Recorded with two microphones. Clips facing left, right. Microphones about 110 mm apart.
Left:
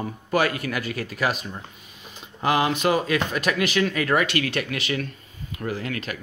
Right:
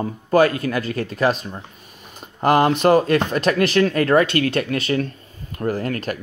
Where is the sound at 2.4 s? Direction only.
50° right (ahead or behind).